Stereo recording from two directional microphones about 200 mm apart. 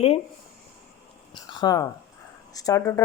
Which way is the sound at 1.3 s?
20° left (ahead or behind).